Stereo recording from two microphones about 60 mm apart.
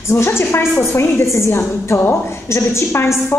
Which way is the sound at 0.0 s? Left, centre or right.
Left.